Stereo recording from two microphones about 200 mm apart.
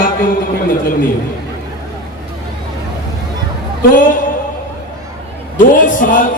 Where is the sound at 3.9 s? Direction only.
40° left (ahead or behind).